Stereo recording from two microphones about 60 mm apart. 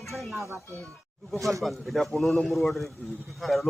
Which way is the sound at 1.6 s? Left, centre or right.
Centre.